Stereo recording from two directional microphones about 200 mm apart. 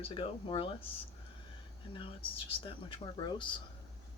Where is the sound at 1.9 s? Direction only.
25° left (ahead or behind).